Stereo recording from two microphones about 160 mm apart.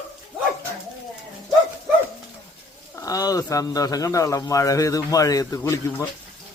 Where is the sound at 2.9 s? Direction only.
20° left (ahead or behind).